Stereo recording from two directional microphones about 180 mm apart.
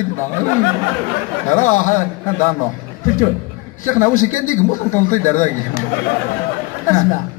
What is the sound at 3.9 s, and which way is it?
A woman's voice, 45° left (ahead or behind).